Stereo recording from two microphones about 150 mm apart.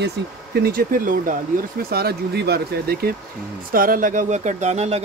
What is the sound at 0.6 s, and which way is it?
Speech, 75° right (ahead or behind).